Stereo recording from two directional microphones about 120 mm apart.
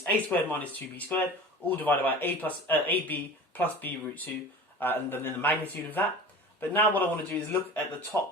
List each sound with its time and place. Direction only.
0.3 s speech: 15° left (ahead or behind)